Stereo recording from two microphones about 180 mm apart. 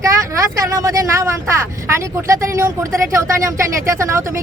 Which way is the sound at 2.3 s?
15° right (ahead or behind).